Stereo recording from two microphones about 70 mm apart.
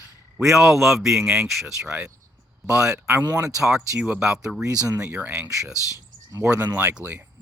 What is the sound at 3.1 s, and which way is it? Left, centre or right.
Speech, right.